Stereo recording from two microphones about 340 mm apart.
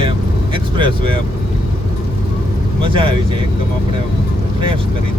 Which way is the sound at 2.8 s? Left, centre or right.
Centre.